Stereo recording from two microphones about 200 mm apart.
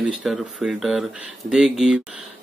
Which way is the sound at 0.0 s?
5° right (ahead or behind).